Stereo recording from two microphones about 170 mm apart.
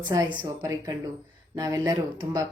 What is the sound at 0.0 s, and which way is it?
Speech, 25° right (ahead or behind).